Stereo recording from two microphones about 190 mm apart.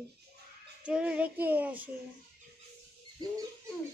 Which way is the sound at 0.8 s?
5° right (ahead or behind).